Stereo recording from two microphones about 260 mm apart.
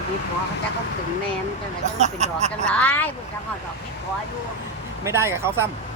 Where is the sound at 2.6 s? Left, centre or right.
Centre.